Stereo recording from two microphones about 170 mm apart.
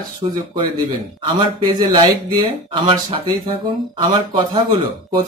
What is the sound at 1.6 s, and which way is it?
Speech, 25° right (ahead or behind).